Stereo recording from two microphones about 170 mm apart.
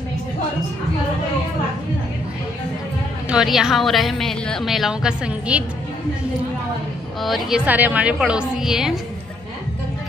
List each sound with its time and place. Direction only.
3.3 s a woman's voice: 5° right (ahead or behind)
7.2 s a woman's voice: centre (ahead or behind)